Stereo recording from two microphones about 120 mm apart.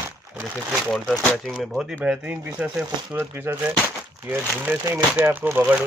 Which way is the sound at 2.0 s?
10° right (ahead or behind).